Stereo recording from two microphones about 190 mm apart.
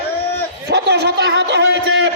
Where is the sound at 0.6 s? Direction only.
60° right (ahead or behind).